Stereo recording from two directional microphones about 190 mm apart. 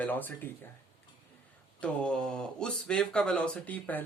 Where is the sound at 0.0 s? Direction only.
10° left (ahead or behind).